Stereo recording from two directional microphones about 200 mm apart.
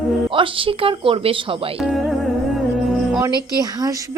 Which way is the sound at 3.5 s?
20° right (ahead or behind).